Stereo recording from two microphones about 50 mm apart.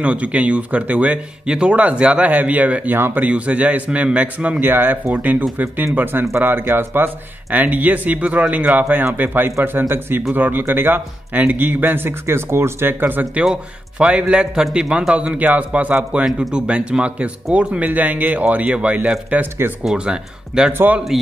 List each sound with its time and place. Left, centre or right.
0.0 s a man's voice: right
1.4 s a man's voice: centre
4.6 s a man's voice: right
6.3 s a man's voice: right
7.5 s a man's voice: right
13.4 s a man's voice: centre
15.1 s a man's voice: right
17.6 s a man's voice: right
20.1 s a man's voice: centre
20.7 s speech: right